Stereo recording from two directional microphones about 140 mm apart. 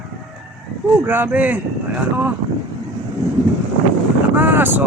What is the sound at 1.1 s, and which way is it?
Speech, 15° right (ahead or behind).